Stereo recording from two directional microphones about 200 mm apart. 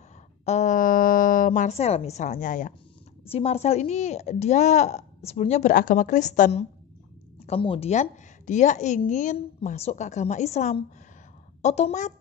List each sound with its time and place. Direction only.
0.5 s a woman's voice: 35° left (ahead or behind)
7.4 s a woman's voice: 25° left (ahead or behind)